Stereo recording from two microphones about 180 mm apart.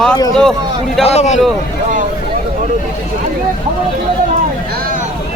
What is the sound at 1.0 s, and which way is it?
Speech, 40° left (ahead or behind).